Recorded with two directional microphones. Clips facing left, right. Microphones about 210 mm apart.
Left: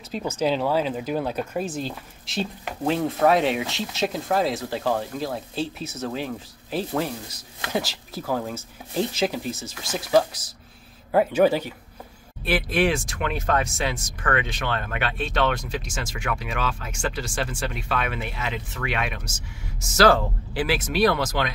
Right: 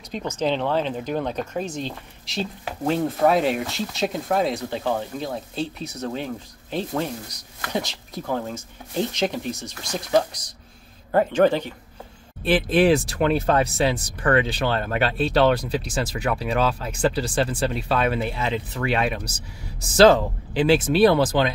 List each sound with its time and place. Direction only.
0.1 s speech: 10° left (ahead or behind)
12.4 s speech: 30° right (ahead or behind)